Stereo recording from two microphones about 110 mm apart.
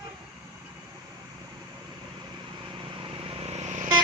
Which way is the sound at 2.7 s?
55° right (ahead or behind).